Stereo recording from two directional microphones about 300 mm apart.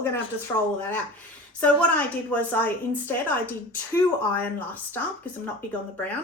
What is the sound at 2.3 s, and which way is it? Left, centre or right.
A woman's voice, centre.